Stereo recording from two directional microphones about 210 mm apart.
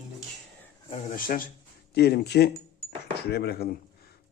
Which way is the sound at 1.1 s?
40° left (ahead or behind).